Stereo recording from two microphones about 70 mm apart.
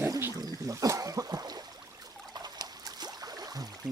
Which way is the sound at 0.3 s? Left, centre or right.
Right.